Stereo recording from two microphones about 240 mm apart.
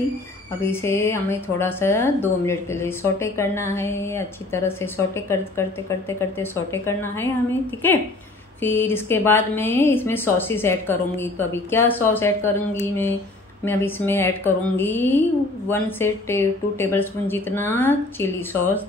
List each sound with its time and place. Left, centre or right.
0.6 s speech: centre